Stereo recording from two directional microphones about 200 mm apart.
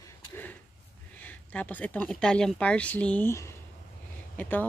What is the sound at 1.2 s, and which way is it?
Speech, 10° left (ahead or behind).